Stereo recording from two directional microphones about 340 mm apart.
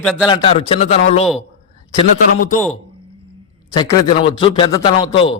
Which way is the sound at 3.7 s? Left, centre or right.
Centre.